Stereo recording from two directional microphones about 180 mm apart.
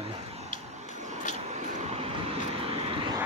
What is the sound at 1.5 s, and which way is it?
Vehicle, 40° right (ahead or behind).